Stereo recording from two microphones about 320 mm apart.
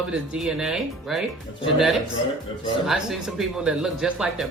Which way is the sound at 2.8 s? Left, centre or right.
Centre.